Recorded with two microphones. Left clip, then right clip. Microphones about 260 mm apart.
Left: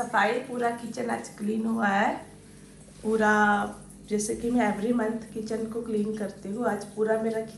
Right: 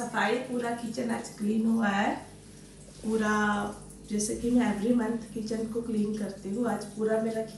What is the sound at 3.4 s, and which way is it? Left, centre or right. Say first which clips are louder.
Speech: left 6 dB; centre.